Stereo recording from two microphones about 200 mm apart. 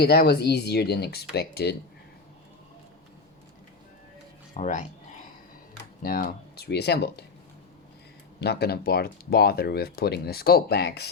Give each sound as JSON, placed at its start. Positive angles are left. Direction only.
{"t": 0.0, "sound": "speech", "side_deg": 50}
{"t": 4.5, "sound": "a sound", "side_deg": 40}
{"t": 6.0, "sound": "speech", "side_deg": 45}
{"t": 8.4, "sound": "speech", "side_deg": 55}